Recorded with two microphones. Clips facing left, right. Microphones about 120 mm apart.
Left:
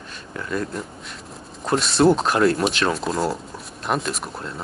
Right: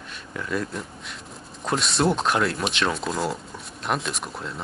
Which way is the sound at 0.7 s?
Centre (ahead or behind).